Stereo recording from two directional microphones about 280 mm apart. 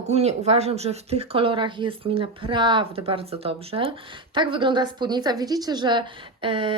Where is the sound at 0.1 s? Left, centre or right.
Right.